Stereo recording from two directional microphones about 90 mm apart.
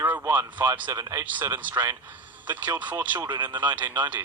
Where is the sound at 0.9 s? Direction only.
40° right (ahead or behind).